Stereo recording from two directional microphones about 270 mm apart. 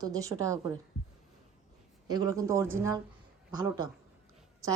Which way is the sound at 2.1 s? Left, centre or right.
Centre.